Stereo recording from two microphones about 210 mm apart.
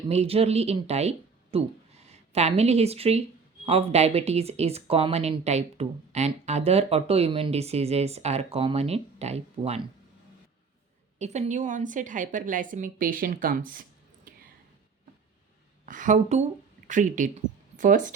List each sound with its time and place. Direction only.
0.1 s speech: 30° right (ahead or behind)
11.2 s a woman's voice: 30° right (ahead or behind)
15.9 s speech: 35° right (ahead or behind)